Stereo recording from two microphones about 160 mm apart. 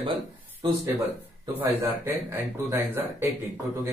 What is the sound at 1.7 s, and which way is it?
Speech, 15° right (ahead or behind).